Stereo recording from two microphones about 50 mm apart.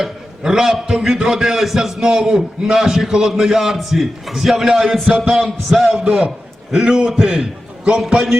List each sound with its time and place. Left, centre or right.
0.0 s a man's voice: centre